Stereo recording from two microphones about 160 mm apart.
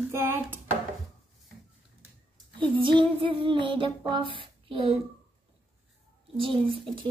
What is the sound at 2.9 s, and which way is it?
Child singing, 30° right (ahead or behind).